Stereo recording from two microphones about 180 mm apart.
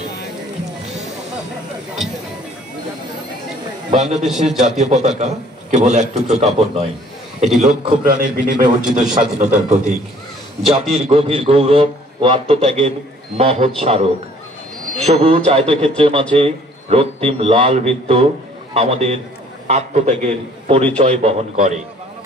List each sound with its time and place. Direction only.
3.9 s a man's voice: 40° right (ahead or behind)
7.6 s a man's voice: 50° right (ahead or behind)